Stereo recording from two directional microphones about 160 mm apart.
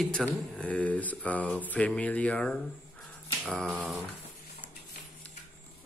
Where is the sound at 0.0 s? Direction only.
5° left (ahead or behind).